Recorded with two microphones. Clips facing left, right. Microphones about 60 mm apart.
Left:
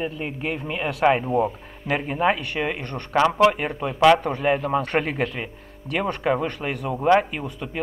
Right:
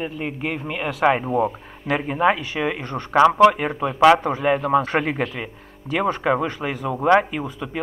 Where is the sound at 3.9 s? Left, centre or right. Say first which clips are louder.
Right 2 dB; centre.